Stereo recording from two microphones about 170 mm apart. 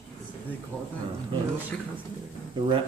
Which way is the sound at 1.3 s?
30° right (ahead or behind).